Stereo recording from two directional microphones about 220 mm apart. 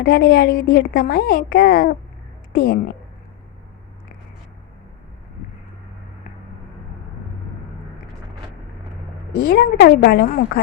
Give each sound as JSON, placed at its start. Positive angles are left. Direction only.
{"t": 0.0, "sound": "a woman's voice", "side_deg": 45}
{"t": 9.5, "sound": "a woman's voice", "side_deg": 45}